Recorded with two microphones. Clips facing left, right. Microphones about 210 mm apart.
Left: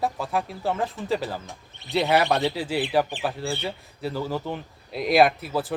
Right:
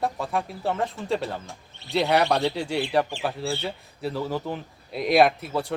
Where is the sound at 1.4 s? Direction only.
15° left (ahead or behind).